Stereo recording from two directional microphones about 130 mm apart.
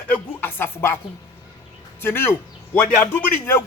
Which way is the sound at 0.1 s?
15° left (ahead or behind).